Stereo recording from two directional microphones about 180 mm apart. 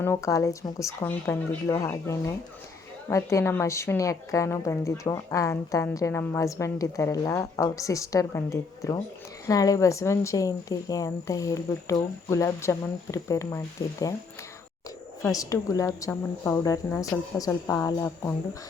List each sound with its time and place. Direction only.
0.0 s a woman's voice: 15° left (ahead or behind)
15.2 s a woman's voice: 20° left (ahead or behind)